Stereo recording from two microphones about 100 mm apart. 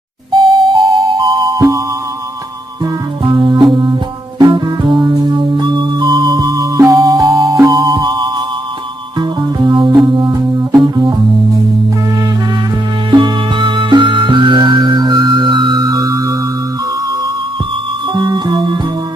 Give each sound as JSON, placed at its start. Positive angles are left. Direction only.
{"t": 0.3, "sound": "music", "side_deg": -50}
{"t": 3.2, "sound": "music", "side_deg": -45}
{"t": 9.6, "sound": "keyboard", "side_deg": -50}
{"t": 10.1, "sound": "music", "side_deg": -45}
{"t": 13.1, "sound": "music", "side_deg": -50}
{"t": 18.1, "sound": "music", "side_deg": -50}